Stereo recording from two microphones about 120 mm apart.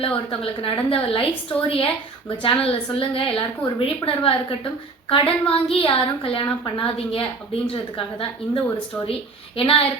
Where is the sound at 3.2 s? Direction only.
50° left (ahead or behind).